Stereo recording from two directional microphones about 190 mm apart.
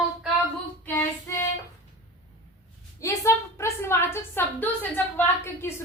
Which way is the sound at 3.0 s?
15° left (ahead or behind).